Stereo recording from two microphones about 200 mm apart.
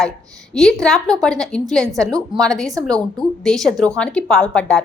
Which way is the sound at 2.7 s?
20° right (ahead or behind).